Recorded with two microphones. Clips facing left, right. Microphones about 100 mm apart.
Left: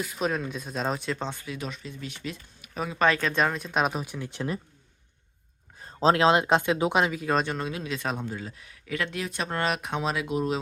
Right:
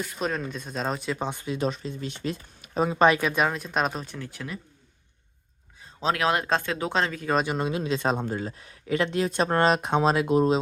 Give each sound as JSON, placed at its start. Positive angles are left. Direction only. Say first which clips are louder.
{"t": 0.0, "sound": "speech", "louder": "left 1 dB", "side_deg": 0}
{"t": 1.2, "sound": "speech", "louder": "right 6 dB", "side_deg": -20}
{"t": 3.1, "sound": "speech", "louder": "right 2 dB", "side_deg": -10}
{"t": 4.3, "sound": "speech", "louder": "left 5 dB", "side_deg": 30}
{"t": 6.0, "sound": "speech", "louder": "left 4 dB", "side_deg": 30}
{"t": 7.7, "sound": "speech", "louder": "right 6 dB", "side_deg": -30}
{"t": 8.2, "sound": "speech", "louder": "right 5 dB", "side_deg": -45}